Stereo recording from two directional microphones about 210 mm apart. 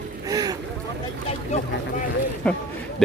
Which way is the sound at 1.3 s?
35° left (ahead or behind).